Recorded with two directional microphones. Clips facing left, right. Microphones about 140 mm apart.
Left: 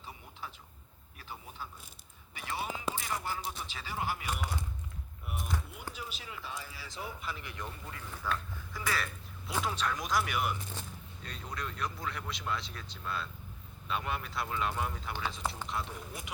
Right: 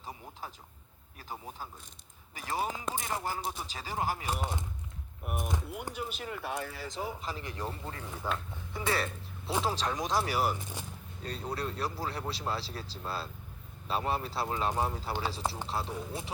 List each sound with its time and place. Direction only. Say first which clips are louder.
0.0 s a sound: right 3 dB; 40° right (ahead or behind)
2.3 s speech: right 4 dB; 40° right (ahead or behind)
5.2 s speech: right 4 dB; 55° right (ahead or behind)
6.9 s speech: right 1 dB; 35° right (ahead or behind)
8.1 s a sound: even; 25° right (ahead or behind)
9.5 s speech: right 3 dB; 30° right (ahead or behind)